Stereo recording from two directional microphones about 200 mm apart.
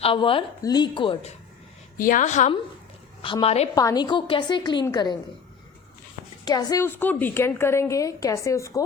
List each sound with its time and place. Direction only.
0.0 s a woman's voice: 25° left (ahead or behind)
2.0 s a woman's voice: 40° left (ahead or behind)
3.2 s a woman's voice: 25° left (ahead or behind)
3.8 s a woman's voice: 20° left (ahead or behind)
6.4 s a woman's voice: 20° left (ahead or behind)